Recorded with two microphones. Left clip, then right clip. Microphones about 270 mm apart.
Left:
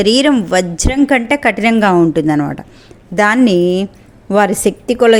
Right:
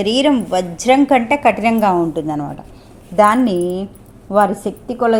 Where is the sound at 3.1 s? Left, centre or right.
Left.